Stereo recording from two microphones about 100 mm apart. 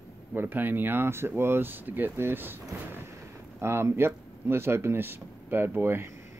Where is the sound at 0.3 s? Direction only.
20° right (ahead or behind).